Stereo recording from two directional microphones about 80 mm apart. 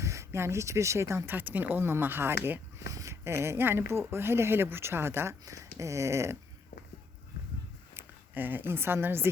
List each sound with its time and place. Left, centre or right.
0.0 s speech: right
1.4 s speech: right
2.9 s speech: right
7.9 s speech: right